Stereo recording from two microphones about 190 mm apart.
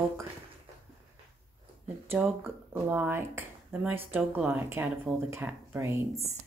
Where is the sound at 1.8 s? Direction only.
10° right (ahead or behind).